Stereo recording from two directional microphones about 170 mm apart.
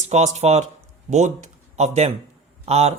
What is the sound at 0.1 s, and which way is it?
Speech, 40° right (ahead or behind).